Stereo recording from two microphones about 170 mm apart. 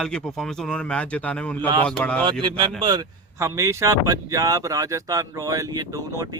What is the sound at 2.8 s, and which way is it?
Speech, 25° right (ahead or behind).